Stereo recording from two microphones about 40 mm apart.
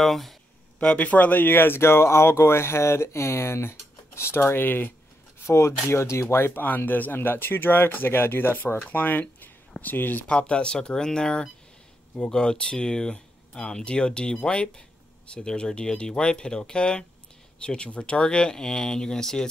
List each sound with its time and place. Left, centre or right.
0.0 s speech: centre
0.7 s speech: left
6.1 s speech: left
6.8 s speech: left
9.4 s a sound: left
10.2 s speech: left